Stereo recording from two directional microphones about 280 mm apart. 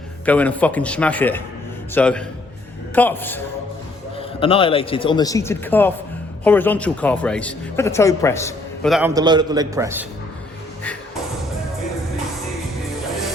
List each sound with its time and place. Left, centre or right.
0.3 s speech: centre
4.2 s speech: centre